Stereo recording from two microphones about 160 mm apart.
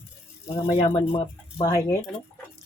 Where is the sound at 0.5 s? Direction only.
25° left (ahead or behind).